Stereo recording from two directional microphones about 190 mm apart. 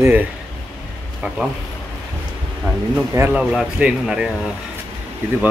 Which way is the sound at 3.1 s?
10° right (ahead or behind).